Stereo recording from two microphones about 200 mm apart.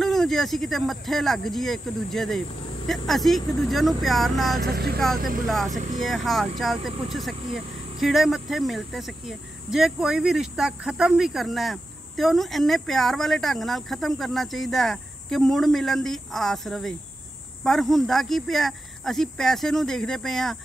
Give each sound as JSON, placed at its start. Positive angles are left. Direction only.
{"t": 0.0, "sound": "speech", "side_deg": 0}
{"t": 4.6, "sound": "speech", "side_deg": -50}
{"t": 5.7, "sound": "speech", "side_deg": -40}
{"t": 6.0, "sound": "speech", "side_deg": 0}